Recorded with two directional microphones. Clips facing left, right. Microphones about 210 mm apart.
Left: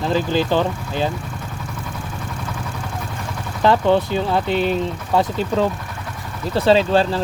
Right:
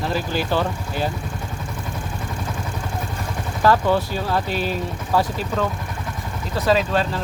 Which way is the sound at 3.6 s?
25° left (ahead or behind).